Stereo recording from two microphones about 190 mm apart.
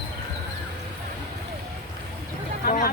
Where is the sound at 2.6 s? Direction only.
45° left (ahead or behind).